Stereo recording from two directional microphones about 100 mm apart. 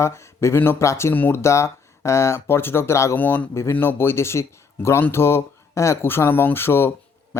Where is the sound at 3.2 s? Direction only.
15° left (ahead or behind).